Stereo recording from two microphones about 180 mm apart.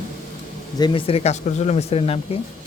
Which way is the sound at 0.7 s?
25° left (ahead or behind).